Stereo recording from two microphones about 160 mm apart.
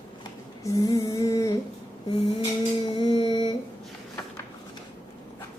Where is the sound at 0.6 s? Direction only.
20° left (ahead or behind).